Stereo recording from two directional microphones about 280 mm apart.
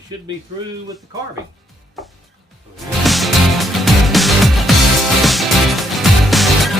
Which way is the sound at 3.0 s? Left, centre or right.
Centre.